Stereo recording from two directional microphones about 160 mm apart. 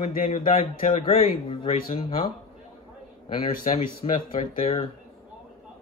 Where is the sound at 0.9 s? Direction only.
35° left (ahead or behind).